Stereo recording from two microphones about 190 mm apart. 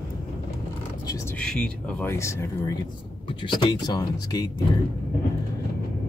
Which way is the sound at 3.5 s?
25° left (ahead or behind).